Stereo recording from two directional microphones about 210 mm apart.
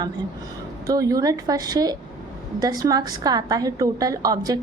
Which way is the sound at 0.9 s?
15° right (ahead or behind).